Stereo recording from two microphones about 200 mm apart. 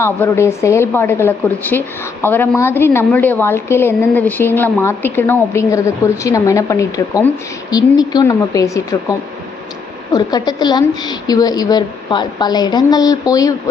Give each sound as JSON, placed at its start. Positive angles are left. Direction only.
{"t": 0.0, "sound": "a woman's voice", "side_deg": 10}